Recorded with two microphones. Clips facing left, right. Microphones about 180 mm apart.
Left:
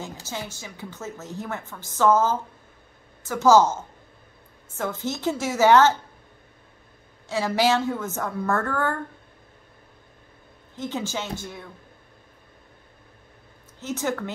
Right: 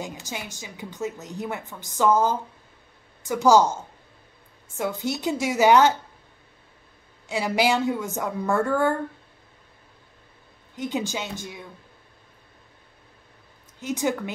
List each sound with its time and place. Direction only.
0.0 s a woman's voice: 15° right (ahead or behind)
4.7 s a woman's voice: 15° right (ahead or behind)
7.2 s a woman's voice: 15° right (ahead or behind)
10.8 s a woman's voice: 15° right (ahead or behind)
13.7 s a woman's voice: 15° right (ahead or behind)